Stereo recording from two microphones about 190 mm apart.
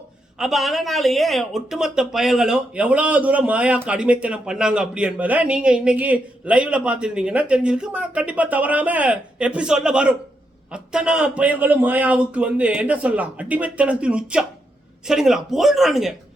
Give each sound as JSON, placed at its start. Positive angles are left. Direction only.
{"t": 0.3, "sound": "a man's voice", "side_deg": 0}